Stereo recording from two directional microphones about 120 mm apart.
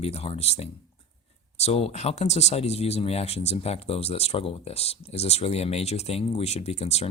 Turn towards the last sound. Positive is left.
turn(degrees=60)  # may be behind; listen again after turning